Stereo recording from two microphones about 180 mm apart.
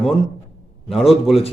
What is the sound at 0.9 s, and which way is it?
Speech, centre (ahead or behind).